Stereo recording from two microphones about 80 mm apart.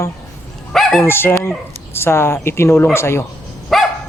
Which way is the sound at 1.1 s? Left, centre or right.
Left.